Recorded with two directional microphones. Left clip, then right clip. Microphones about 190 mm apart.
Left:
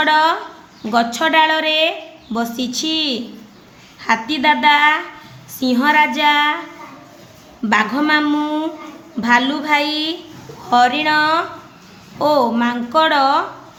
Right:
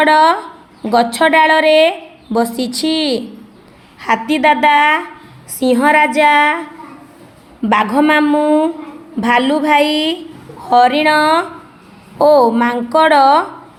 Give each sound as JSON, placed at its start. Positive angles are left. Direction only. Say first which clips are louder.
{"t": 0.0, "sound": "a woman's voice", "louder": "right 4 dB", "side_deg": -35}
{"t": 7.7, "sound": "a woman's voice", "louder": "right 3 dB", "side_deg": -40}